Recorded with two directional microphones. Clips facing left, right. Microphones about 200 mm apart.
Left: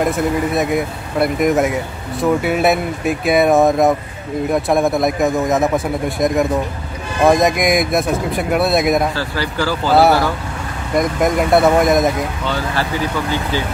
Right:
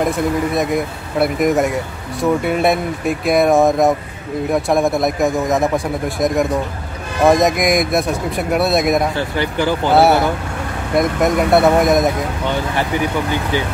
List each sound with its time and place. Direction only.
0.6 s a man's voice: centre (ahead or behind)
9.1 s speech: 20° right (ahead or behind)
11.0 s a man's voice: centre (ahead or behind)